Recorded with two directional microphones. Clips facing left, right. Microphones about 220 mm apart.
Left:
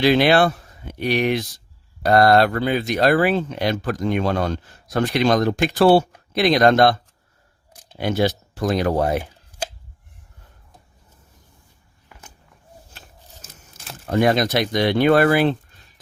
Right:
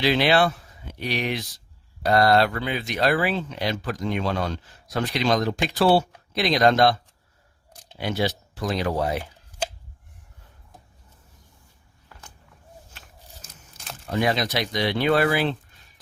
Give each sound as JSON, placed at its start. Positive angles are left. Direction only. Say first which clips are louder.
{"t": 0.0, "sound": "speech", "louder": "left 5 dB", "side_deg": 50}
{"t": 7.9, "sound": "speech", "louder": "left 5 dB", "side_deg": 50}
{"t": 13.4, "sound": "a sound", "louder": "left 2 dB", "side_deg": 5}
{"t": 14.1, "sound": "speech", "louder": "left 6 dB", "side_deg": 50}